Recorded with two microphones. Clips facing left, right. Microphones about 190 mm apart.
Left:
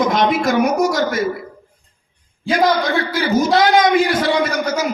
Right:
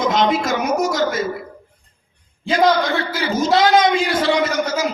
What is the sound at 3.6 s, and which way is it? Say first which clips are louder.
A man's voice: even; 25° right (ahead or behind).